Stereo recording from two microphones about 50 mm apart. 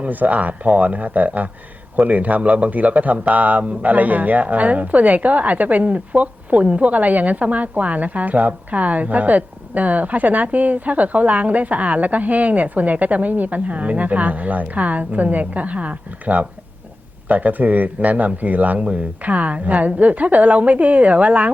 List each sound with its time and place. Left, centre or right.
0.0 s a man's voice: right